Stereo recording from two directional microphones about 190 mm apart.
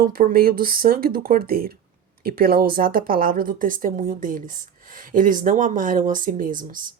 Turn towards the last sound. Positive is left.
turn(degrees=-45)  # may be behind; listen again after turning